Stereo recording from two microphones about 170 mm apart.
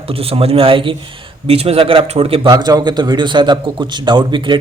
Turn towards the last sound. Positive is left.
turn(degrees=-25)  # may be behind; listen again after turning